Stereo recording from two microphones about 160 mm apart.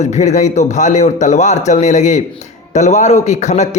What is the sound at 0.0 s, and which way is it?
A man's voice, 45° left (ahead or behind).